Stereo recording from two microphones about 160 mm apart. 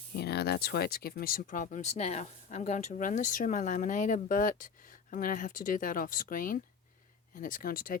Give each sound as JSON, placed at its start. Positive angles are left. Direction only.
{"t": 0.1, "sound": "speech", "side_deg": 90}